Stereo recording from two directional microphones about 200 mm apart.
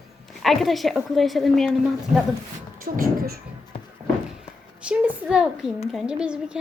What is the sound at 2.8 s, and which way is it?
Speech, 50° right (ahead or behind).